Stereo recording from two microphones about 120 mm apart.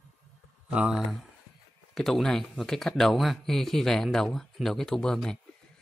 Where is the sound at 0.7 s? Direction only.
10° right (ahead or behind).